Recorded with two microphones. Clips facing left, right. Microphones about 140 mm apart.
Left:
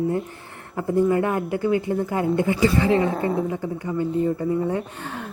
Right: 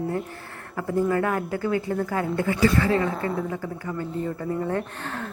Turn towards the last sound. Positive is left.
turn(degrees=10)  # may be behind; listen again after turning